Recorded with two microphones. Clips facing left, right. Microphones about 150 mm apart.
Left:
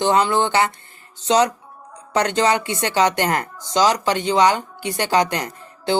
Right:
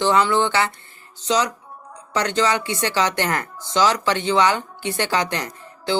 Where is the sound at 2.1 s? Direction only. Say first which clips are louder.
Left 2 dB; 50° left (ahead or behind).